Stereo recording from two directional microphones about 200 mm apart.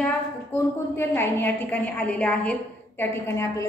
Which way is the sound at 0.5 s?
10° left (ahead or behind).